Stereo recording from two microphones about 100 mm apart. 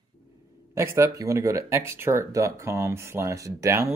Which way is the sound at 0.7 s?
30° right (ahead or behind).